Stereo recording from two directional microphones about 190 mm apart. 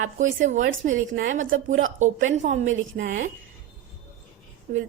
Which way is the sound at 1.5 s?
90° right.